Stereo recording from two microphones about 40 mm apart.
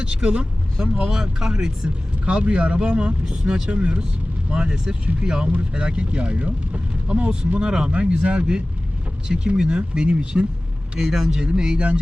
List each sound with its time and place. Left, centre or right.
0.0 s speech: right
1.1 s speech: centre; by 4.0 s right
4.5 s speech: right
10.9 s speech: centre
11.6 s speech: right